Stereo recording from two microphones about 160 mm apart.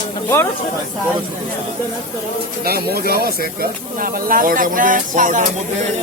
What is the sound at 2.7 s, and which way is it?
A man's voice, 75° right (ahead or behind).